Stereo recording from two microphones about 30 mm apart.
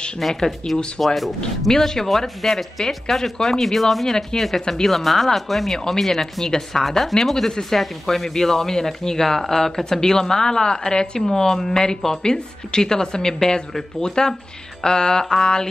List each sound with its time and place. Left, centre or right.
0.2 s speech: centre
0.7 s speech: centre
1.0 s speech: centre
1.7 s speech: centre
2.0 s speech: centre
4.6 s a woman's voice: left
4.8 s a woman's voice: centre; by 15.7 s left